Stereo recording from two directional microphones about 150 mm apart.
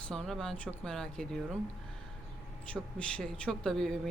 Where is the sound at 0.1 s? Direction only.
5° left (ahead or behind).